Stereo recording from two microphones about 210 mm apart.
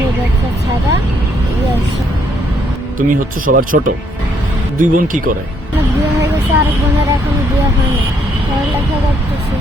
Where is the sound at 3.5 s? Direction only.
40° right (ahead or behind).